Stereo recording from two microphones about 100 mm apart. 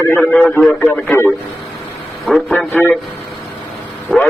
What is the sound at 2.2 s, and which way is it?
Speech, centre (ahead or behind).